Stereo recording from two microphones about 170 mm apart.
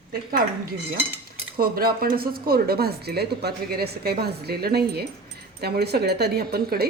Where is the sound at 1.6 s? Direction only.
60° right (ahead or behind).